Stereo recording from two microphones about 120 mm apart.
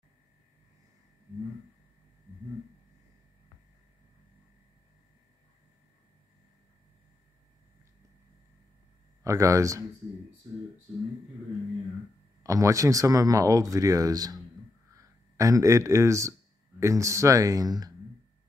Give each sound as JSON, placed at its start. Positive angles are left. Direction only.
{"t": 9.2, "sound": "speech", "side_deg": -25}
{"t": 12.4, "sound": "speech", "side_deg": -25}